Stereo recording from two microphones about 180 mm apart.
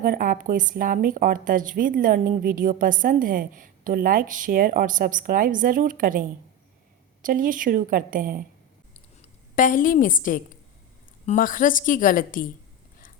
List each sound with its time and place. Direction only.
0.0 s speech: 50° right (ahead or behind)
9.6 s a woman's voice: 50° left (ahead or behind)